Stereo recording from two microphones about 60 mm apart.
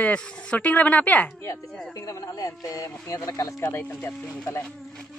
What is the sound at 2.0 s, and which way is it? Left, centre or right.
Speech, left.